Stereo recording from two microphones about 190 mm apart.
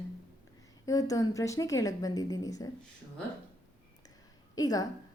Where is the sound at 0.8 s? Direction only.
20° left (ahead or behind).